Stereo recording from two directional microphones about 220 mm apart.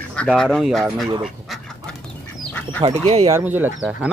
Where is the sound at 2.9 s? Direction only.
30° right (ahead or behind).